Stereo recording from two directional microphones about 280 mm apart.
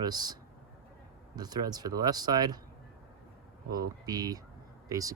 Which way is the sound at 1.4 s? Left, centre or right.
Centre.